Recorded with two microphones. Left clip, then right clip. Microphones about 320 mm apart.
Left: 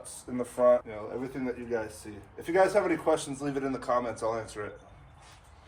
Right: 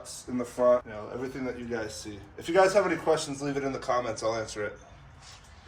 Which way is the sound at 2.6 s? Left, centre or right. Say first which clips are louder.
Right 2 dB; left.